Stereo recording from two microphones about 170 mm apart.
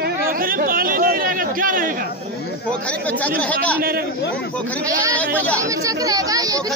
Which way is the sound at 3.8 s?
60° right (ahead or behind).